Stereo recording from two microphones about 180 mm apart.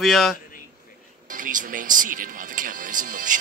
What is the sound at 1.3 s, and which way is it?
Music, 45° right (ahead or behind).